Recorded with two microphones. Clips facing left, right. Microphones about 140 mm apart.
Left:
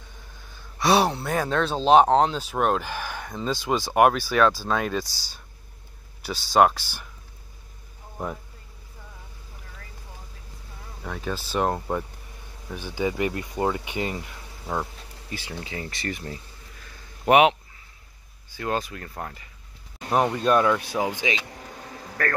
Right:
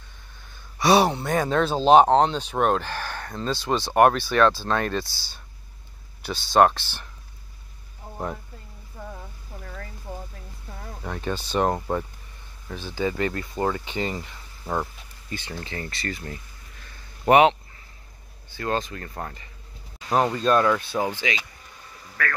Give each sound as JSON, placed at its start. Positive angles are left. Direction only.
{"t": 0.7, "sound": "speech", "side_deg": 0}
{"t": 5.0, "sound": "speech", "side_deg": 40}
{"t": 6.2, "sound": "speech", "side_deg": 10}
{"t": 11.1, "sound": "speech", "side_deg": 0}
{"t": 12.6, "sound": "speech", "side_deg": 15}
{"t": 17.2, "sound": "a sound", "side_deg": 5}
{"t": 18.5, "sound": "speech", "side_deg": 10}
{"t": 21.5, "sound": "a sound", "side_deg": 60}